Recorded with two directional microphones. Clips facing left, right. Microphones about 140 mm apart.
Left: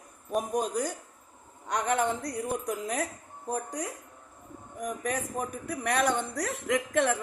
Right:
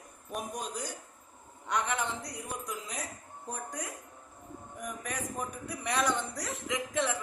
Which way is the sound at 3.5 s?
35° left (ahead or behind).